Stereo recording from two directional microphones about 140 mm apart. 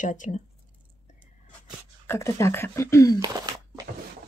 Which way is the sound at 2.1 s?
20° left (ahead or behind).